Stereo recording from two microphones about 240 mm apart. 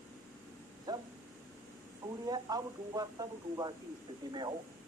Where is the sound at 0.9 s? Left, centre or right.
Centre.